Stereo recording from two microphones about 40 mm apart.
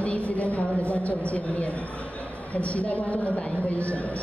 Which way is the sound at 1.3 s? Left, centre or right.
Left.